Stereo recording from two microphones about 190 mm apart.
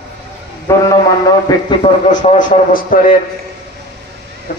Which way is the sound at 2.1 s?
40° left (ahead or behind).